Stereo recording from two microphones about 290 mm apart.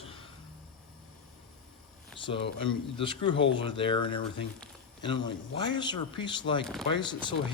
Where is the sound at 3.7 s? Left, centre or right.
Centre.